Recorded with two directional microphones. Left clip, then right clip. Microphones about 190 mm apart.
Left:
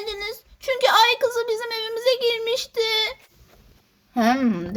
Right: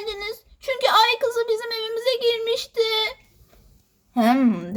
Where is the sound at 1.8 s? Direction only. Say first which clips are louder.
Left 3 dB; 35° left (ahead or behind).